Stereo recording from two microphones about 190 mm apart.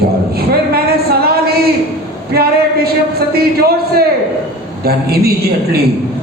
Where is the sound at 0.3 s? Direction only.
55° right (ahead or behind).